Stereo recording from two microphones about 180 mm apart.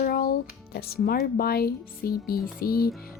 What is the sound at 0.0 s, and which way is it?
Speech, 55° left (ahead or behind).